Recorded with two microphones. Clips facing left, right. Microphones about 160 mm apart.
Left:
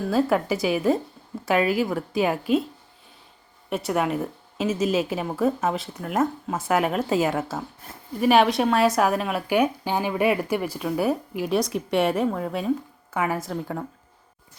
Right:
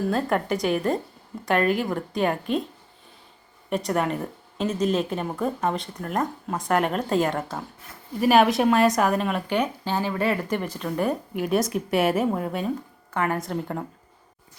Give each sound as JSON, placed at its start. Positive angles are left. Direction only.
{"t": 0.1, "sound": "speech", "side_deg": 5}
{"t": 3.7, "sound": "speech", "side_deg": 5}